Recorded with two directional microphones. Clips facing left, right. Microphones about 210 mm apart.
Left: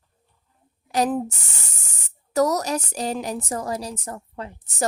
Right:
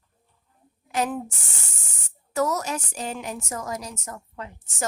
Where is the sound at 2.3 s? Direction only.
40° left (ahead or behind).